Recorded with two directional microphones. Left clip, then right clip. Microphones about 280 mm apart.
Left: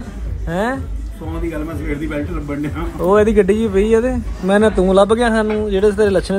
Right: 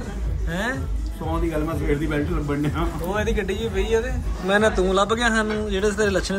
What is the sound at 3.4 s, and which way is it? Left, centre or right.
Speech, centre.